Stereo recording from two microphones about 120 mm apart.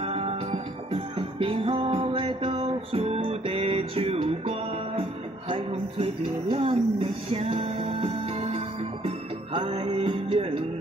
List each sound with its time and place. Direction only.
0.0 s music: 55° right (ahead or behind)
5.5 s a sound: 50° right (ahead or behind)
6.5 s music: 50° right (ahead or behind)